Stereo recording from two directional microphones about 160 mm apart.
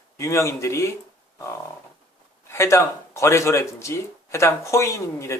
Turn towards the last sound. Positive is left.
turn(degrees=15)  # may be behind; listen again after turning